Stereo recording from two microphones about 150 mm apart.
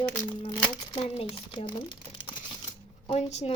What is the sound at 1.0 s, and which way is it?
Speech, 40° left (ahead or behind).